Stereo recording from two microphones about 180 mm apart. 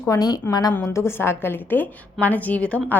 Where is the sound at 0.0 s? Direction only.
20° left (ahead or behind).